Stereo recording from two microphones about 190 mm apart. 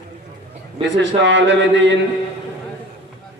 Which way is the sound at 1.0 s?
70° right (ahead or behind).